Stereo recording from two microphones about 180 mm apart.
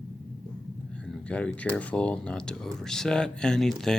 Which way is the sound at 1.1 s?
5° left (ahead or behind).